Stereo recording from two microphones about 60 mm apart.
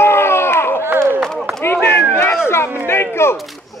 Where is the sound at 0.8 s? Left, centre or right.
Right.